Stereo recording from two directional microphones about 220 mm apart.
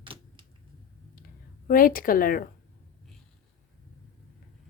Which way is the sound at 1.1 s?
40° left (ahead or behind).